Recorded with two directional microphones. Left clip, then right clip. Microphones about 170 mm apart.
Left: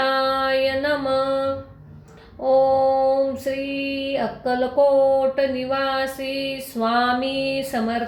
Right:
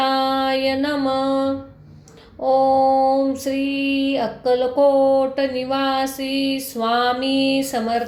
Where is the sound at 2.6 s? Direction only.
40° right (ahead or behind).